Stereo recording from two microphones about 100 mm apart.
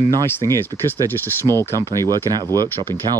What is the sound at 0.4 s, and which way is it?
Speech, 25° left (ahead or behind).